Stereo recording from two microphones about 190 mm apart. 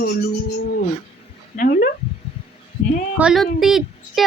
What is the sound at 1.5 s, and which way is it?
Speech, 45° left (ahead or behind).